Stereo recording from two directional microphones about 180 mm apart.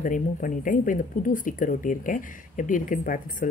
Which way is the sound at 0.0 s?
50° left (ahead or behind).